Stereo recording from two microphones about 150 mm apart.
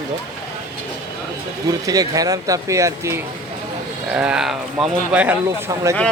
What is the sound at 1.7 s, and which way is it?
Speech, 25° right (ahead or behind).